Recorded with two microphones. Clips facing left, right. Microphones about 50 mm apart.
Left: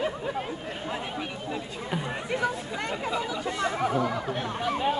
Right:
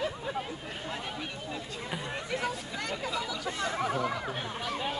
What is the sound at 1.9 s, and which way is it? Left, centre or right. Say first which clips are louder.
Chatter: left 5 dB; centre.